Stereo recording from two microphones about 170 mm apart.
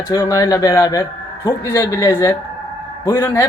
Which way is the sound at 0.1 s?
20° left (ahead or behind).